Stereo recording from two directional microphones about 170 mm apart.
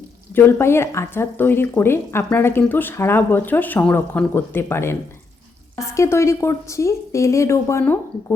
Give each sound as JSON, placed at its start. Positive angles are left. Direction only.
{"t": 0.3, "sound": "speech", "side_deg": 15}